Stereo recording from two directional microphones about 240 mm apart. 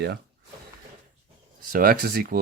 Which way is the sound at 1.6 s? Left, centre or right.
Right.